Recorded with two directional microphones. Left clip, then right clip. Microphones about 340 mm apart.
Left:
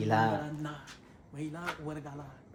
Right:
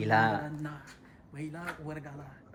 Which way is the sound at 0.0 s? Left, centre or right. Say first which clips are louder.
Right 2 dB; centre.